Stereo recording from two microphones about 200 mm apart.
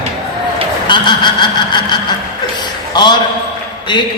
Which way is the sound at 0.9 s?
20° left (ahead or behind).